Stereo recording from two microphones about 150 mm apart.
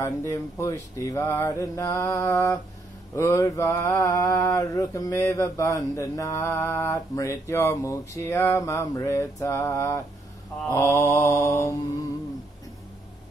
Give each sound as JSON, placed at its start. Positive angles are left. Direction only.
{"t": 0.0, "sound": "mantra", "side_deg": 20}